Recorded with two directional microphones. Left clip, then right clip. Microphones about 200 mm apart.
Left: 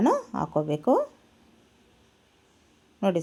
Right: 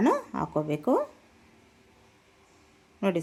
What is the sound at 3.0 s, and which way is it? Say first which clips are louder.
Speech: left 2 dB; 5° left (ahead or behind).